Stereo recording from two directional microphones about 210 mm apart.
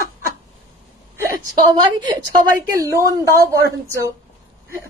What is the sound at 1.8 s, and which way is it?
A woman's voice, 20° right (ahead or behind).